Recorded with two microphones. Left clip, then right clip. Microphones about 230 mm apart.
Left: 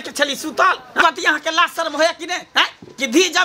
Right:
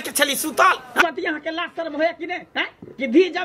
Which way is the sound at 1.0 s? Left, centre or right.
Left.